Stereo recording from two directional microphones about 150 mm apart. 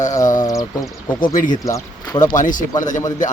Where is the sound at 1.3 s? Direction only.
60° left (ahead or behind).